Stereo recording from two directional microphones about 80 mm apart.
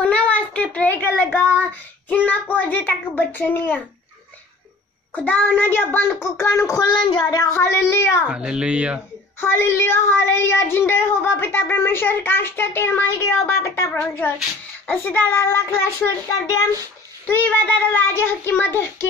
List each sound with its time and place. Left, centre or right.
0.0 s a sound: centre
1.5 s speech: left
5.1 s a child's voice: left
6.8 s speech: left
7.5 s a child's voice: left
8.3 s a child's voice: centre
9.4 s speech: left
13.9 s a child's voice: left
17.3 s speech: left